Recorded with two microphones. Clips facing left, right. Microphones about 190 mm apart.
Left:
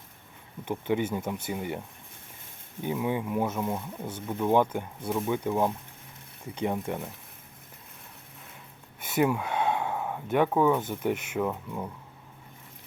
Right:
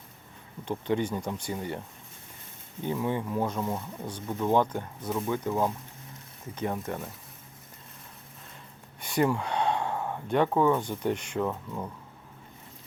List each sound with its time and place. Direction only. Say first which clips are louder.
0.6 s speech: even; 10° left (ahead or behind)
2.8 s speech: left 1 dB; 10° left (ahead or behind)
9.0 s speech: even; 5° left (ahead or behind)